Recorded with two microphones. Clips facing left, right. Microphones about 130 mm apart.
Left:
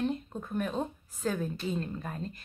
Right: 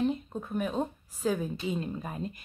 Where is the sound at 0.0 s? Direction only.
5° right (ahead or behind).